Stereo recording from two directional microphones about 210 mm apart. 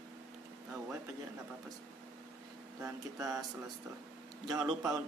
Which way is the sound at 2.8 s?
15° right (ahead or behind).